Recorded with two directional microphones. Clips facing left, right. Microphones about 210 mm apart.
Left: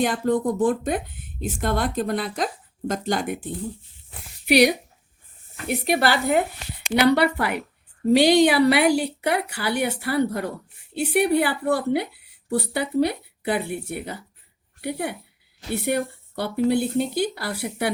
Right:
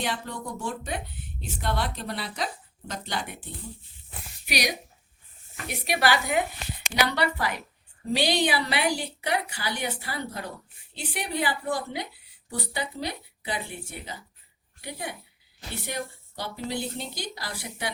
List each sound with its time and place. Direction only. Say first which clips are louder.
0.0 s a woman's voice: left 11 dB; 50° left (ahead or behind)
4.4 s a woman's voice: left 13 dB; 60° left (ahead or behind)
8.7 s a woman's voice: left 9 dB; 65° left (ahead or behind)